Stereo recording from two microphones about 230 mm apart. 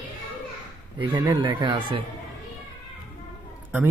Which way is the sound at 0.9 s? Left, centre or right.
Centre.